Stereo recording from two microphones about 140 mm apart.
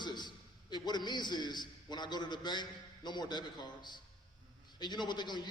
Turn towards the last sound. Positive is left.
turn(degrees=30)  # may be behind; listen again after turning